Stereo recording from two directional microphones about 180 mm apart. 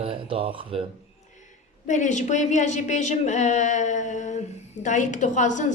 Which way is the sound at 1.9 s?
40° left (ahead or behind).